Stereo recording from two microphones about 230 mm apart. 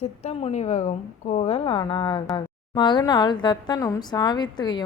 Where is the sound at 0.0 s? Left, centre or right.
Left.